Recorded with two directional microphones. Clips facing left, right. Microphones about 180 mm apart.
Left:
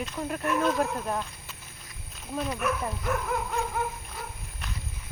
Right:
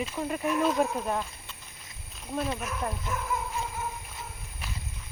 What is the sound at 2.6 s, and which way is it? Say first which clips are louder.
Speech: left 8 dB; 65° left (ahead or behind).